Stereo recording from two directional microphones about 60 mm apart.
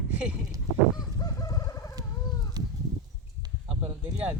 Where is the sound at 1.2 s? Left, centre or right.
Left.